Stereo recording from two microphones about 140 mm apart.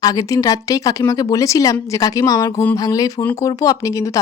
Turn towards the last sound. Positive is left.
turn(degrees=25)  # may be behind; listen again after turning